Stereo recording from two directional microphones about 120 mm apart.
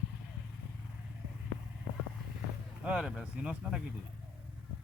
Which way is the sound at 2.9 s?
5° right (ahead or behind).